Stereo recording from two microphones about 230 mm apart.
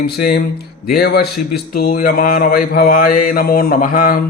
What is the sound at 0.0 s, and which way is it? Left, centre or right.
Speech, left.